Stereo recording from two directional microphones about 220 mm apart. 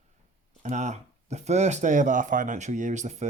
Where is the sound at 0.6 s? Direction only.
30° right (ahead or behind).